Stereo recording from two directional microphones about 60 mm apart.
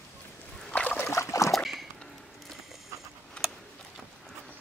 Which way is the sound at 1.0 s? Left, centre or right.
Left.